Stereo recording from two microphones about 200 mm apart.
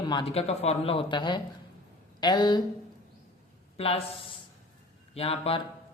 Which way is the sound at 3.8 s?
30° left (ahead or behind).